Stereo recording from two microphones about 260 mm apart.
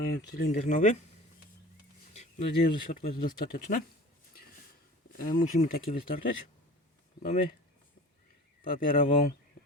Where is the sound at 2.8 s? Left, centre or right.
Left.